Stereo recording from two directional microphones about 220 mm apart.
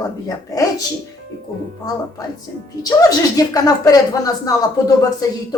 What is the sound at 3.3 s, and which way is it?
A man's voice, 15° left (ahead or behind).